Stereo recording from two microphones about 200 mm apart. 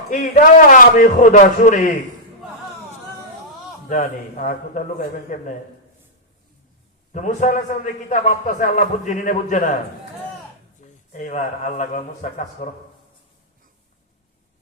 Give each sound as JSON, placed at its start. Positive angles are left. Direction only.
{"t": 0.1, "sound": "a man's voice", "side_deg": 40}
{"t": 3.8, "sound": "a man's voice", "side_deg": 40}
{"t": 7.1, "sound": "a man's voice", "side_deg": 40}
{"t": 10.8, "sound": "a man's voice", "side_deg": 40}